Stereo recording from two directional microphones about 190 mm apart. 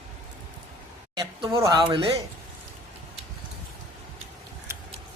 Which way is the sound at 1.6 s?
20° right (ahead or behind).